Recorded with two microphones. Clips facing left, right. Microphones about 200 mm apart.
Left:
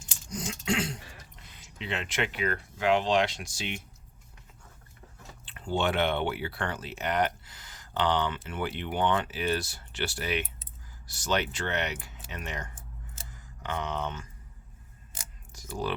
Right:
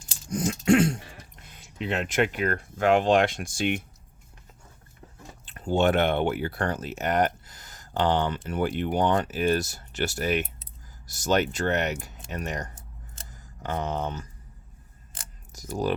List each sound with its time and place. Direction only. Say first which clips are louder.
0.3 s throat clearing: right 10 dB; 50° right (ahead or behind)
1.4 s speech: right 8 dB; 50° right (ahead or behind)
5.5 s speech: right 6 dB; 45° right (ahead or behind)
15.5 s speech: right 5 dB; 40° right (ahead or behind)